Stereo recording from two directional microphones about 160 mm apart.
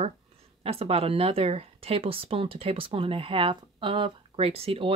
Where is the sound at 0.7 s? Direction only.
40° right (ahead or behind).